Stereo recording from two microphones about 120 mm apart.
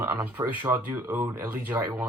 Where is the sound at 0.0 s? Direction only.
20° right (ahead or behind).